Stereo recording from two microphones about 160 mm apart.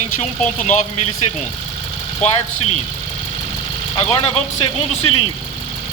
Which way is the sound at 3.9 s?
35° left (ahead or behind).